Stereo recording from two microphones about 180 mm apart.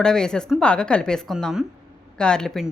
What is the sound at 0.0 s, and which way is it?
A woman's voice, 5° left (ahead or behind).